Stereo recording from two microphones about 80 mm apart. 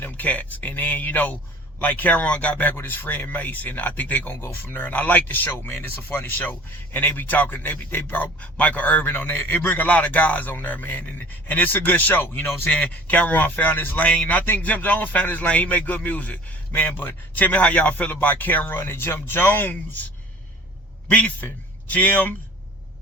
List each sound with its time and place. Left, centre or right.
0.0 s speech: centre
21.1 s a man's voice: centre